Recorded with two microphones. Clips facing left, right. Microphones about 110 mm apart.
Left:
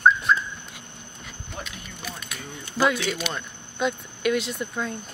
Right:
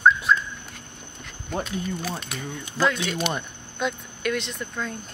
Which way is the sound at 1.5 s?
40° right (ahead or behind).